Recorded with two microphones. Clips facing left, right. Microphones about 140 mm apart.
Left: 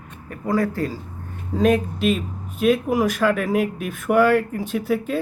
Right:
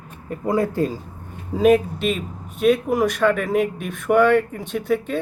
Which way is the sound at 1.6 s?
5° right (ahead or behind).